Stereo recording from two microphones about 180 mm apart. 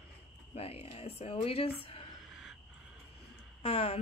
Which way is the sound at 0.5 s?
35° left (ahead or behind).